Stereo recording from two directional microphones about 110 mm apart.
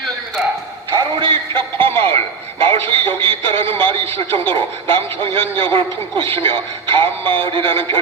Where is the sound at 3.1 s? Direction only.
55° right (ahead or behind).